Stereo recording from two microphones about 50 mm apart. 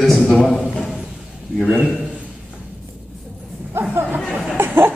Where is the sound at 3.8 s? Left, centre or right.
Right.